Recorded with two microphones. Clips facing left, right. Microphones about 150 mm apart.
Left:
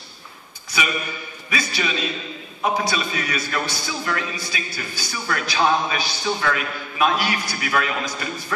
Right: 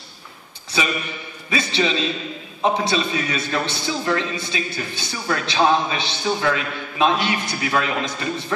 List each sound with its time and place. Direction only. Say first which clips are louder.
0.7 s a man's voice: right 2 dB; 25° right (ahead or behind)